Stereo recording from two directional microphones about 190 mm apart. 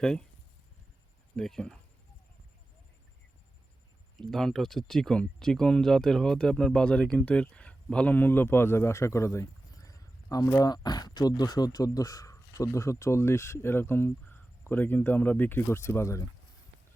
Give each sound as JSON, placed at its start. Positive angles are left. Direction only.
{"t": 0.0, "sound": "speech", "side_deg": 5}
{"t": 1.4, "sound": "speech", "side_deg": 5}
{"t": 4.2, "sound": "speech", "side_deg": 0}